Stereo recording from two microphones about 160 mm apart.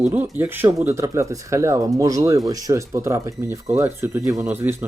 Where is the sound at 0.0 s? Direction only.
10° right (ahead or behind).